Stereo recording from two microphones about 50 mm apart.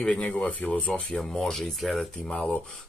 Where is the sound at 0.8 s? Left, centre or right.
Centre.